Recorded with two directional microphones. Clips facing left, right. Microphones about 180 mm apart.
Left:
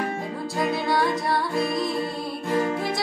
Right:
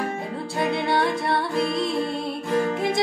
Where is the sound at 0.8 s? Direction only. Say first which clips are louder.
Right 1 dB; 25° right (ahead or behind).